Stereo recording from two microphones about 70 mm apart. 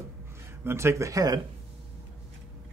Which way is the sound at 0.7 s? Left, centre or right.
Right.